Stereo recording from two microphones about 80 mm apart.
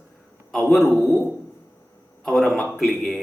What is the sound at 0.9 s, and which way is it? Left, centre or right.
Speech, right.